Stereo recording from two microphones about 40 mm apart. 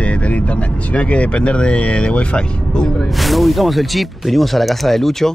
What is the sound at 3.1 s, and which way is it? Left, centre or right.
Speech, centre.